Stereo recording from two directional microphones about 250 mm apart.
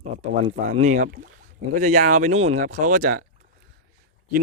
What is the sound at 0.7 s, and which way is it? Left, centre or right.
Speech, right.